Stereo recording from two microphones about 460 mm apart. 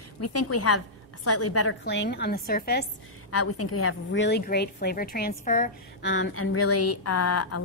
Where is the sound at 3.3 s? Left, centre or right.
Left.